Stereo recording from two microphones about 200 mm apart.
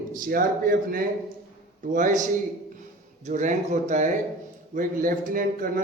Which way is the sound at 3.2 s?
35° right (ahead or behind).